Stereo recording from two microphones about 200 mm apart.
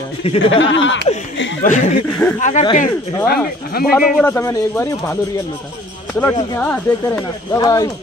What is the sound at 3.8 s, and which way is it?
Speech, 50° left (ahead or behind).